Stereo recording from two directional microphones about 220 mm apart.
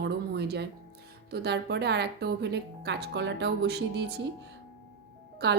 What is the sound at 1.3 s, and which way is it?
A woman's voice, 50° right (ahead or behind).